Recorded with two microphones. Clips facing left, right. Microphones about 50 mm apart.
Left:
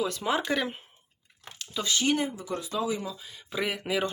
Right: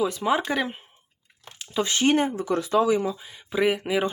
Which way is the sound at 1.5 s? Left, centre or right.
Right.